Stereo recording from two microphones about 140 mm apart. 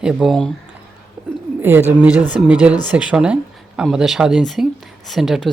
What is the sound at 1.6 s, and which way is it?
Speech, 15° right (ahead or behind).